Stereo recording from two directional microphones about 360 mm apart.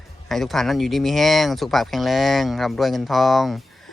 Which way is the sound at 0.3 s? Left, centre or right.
Centre.